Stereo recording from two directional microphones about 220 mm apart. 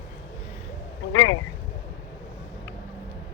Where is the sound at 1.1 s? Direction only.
70° left (ahead or behind).